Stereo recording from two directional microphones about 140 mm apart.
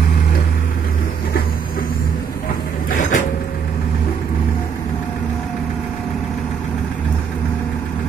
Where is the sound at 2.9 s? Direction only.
65° left (ahead or behind).